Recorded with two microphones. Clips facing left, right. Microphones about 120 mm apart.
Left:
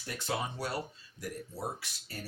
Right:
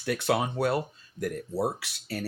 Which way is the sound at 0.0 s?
70° right (ahead or behind).